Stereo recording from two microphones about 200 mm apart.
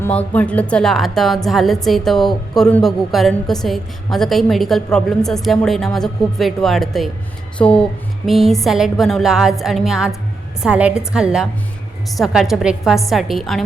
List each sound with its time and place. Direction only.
0.0 s a woman's voice: 5° left (ahead or behind)